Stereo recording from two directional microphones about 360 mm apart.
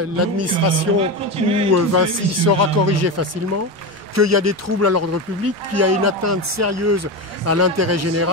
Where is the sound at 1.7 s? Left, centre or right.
Right.